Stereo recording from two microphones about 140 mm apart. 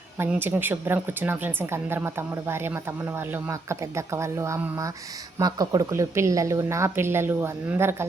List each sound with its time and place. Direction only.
0.2 s a woman's voice: 15° right (ahead or behind)